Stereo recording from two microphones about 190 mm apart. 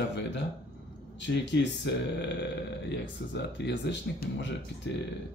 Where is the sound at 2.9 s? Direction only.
65° left (ahead or behind).